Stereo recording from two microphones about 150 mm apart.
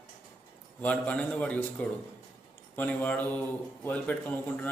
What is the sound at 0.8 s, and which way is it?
A man's voice, 10° left (ahead or behind).